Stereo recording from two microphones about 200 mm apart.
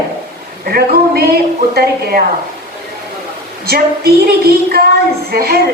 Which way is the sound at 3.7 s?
50° right (ahead or behind).